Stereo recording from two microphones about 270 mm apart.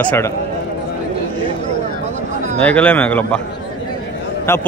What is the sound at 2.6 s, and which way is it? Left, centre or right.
Speech, centre.